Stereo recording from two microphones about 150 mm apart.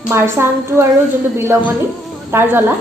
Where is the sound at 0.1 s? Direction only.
15° right (ahead or behind).